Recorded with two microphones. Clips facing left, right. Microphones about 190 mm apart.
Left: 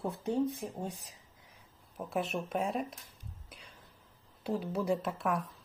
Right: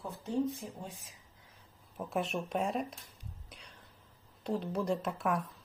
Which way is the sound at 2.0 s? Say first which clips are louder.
Even; centre (ahead or behind).